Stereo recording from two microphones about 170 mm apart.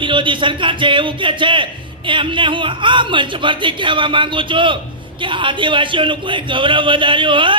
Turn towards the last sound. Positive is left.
turn(degrees=-30)  # may be behind; listen again after turning